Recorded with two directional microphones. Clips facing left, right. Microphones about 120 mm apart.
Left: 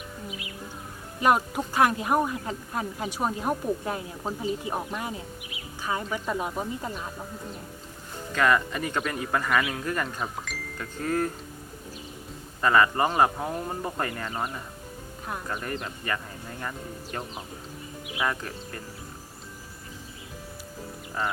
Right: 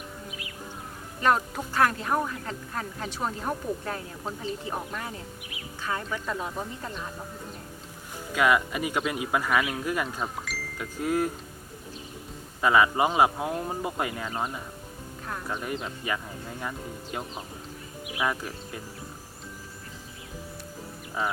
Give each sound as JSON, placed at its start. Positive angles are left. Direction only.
{"t": 0.3, "sound": "music", "side_deg": 20}
{"t": 1.2, "sound": "speech", "side_deg": 15}
{"t": 8.3, "sound": "speech", "side_deg": -10}
{"t": 12.6, "sound": "speech", "side_deg": -10}
{"t": 15.6, "sound": "speech", "side_deg": -5}
{"t": 21.2, "sound": "speech", "side_deg": -5}